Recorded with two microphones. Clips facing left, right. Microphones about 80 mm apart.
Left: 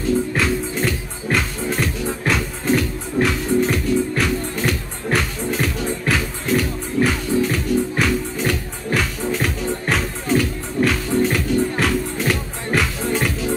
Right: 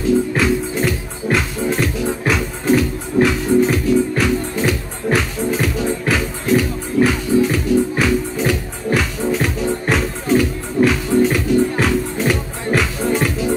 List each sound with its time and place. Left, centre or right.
0.3 s music: centre